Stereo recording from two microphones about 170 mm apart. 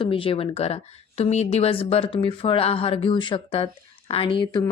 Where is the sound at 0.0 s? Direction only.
30° left (ahead or behind).